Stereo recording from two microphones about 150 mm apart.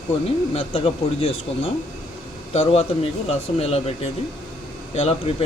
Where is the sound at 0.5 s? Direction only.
40° left (ahead or behind).